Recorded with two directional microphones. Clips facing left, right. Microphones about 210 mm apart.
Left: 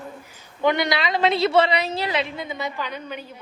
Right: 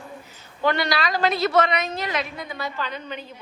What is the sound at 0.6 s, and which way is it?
A woman's voice, 20° left (ahead or behind).